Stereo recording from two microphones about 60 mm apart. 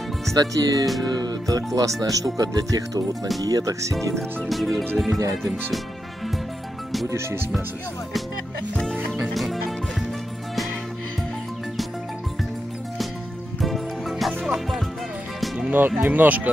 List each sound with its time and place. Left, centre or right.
0.3 s speech: right
4.5 s music: centre
7.1 s speech: right
9.2 s music: centre
13.6 s music: centre
16.0 s speech: right